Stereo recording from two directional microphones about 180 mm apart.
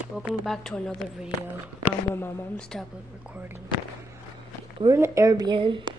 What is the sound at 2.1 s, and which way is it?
Speech, 15° left (ahead or behind).